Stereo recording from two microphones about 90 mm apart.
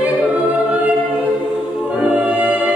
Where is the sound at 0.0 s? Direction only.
20° right (ahead or behind).